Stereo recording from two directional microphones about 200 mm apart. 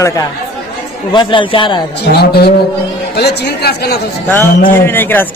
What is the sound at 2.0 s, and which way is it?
A man's voice, 55° left (ahead or behind).